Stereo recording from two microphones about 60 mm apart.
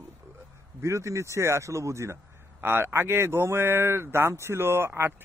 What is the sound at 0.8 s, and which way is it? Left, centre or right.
Speech, right.